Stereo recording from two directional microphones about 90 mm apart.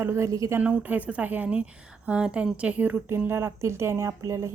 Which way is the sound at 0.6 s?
15° right (ahead or behind).